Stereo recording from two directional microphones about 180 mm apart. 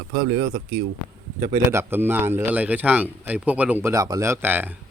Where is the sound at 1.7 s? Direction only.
10° right (ahead or behind).